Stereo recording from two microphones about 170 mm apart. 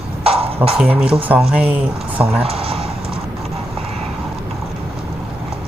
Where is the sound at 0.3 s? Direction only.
35° right (ahead or behind).